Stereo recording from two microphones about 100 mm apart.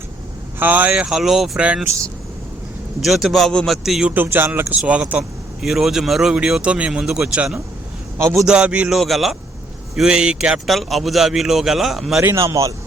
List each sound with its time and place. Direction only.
0.6 s speech: 15° right (ahead or behind)
3.0 s a man's voice: centre (ahead or behind)
4.1 s a man's voice: 20° right (ahead or behind)
9.0 s a man's voice: centre (ahead or behind)
12.2 s speech: 30° right (ahead or behind)